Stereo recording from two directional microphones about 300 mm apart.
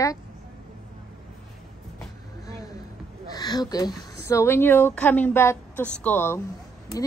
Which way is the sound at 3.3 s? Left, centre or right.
Centre.